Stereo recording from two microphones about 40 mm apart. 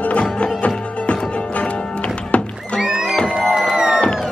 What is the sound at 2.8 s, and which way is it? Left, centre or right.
Music, centre.